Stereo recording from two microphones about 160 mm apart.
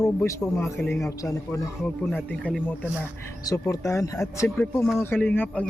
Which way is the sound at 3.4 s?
20° left (ahead or behind).